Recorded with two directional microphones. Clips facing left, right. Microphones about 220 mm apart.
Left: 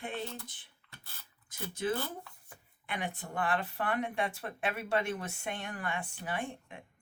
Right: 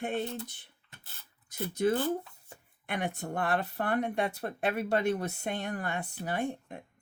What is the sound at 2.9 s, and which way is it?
Speech, 45° right (ahead or behind).